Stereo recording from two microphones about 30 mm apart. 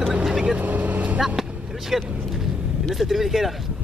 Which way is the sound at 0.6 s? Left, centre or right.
Right.